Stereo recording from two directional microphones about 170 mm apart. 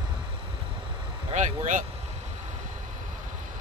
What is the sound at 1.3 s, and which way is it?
Vehicle, 45° right (ahead or behind).